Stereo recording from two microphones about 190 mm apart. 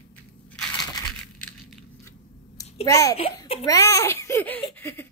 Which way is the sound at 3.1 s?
30° left (ahead or behind).